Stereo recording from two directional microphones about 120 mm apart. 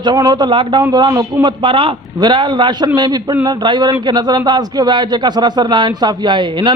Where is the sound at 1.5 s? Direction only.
45° right (ahead or behind).